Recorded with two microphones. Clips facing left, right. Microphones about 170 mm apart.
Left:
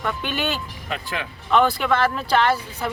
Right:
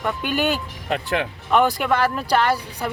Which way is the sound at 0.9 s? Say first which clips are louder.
Right 7 dB; 65° right (ahead or behind).